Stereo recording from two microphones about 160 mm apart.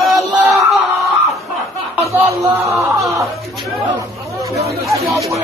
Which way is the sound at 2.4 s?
15° right (ahead or behind).